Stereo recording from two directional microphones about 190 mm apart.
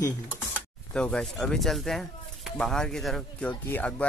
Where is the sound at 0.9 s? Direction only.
5° left (ahead or behind).